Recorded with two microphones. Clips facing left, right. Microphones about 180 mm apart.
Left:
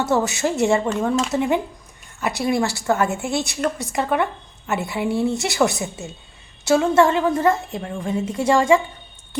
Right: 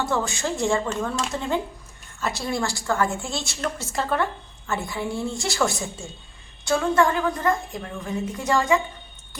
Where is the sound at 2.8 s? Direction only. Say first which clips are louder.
Left 4 dB; 20° left (ahead or behind).